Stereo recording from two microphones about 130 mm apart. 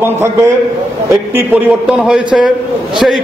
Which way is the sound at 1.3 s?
10° right (ahead or behind).